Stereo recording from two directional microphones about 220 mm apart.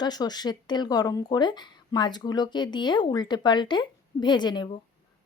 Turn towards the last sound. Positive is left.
turn(degrees=20)  # may be behind; listen again after turning